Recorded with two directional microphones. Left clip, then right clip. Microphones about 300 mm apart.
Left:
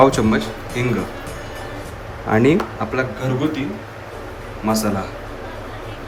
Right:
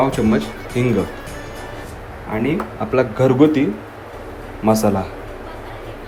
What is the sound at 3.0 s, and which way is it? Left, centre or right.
Speech, centre.